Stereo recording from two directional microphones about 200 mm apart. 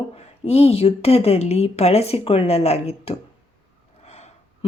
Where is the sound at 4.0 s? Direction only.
30° left (ahead or behind).